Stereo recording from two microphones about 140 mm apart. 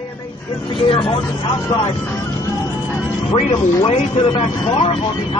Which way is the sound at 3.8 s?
40° left (ahead or behind).